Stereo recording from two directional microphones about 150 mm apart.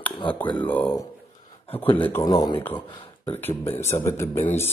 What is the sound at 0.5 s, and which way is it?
Speech, 10° left (ahead or behind).